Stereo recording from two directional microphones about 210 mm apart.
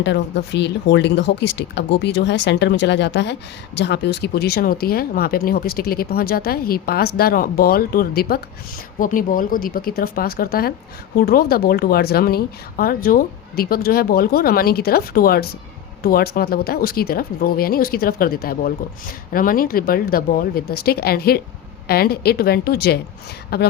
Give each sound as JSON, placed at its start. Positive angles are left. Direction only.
{"t": 0.0, "sound": "speech", "side_deg": 55}